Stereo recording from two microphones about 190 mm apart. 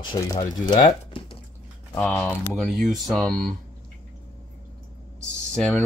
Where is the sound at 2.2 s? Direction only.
Centre (ahead or behind).